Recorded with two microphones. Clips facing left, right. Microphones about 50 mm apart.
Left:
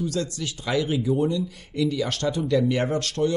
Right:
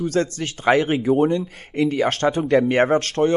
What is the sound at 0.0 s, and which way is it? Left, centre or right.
Speech, right.